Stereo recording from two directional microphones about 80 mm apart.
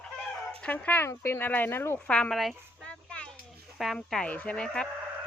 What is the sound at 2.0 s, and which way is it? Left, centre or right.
Speech, centre.